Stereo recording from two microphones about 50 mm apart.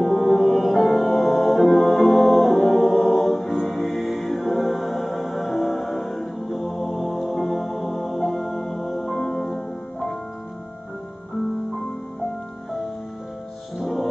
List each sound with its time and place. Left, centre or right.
0.0 s music: centre
13.7 s music: centre